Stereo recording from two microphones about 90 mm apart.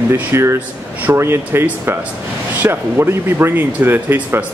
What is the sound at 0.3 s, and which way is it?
Speech, 30° right (ahead or behind).